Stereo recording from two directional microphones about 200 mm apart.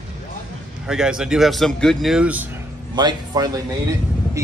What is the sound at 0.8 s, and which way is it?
Speech, 5° right (ahead or behind).